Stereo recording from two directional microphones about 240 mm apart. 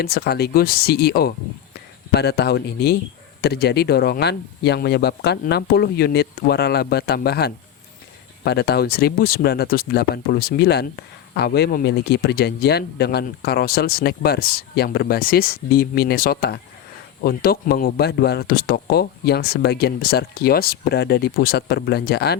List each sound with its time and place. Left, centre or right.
0.0 s speech: left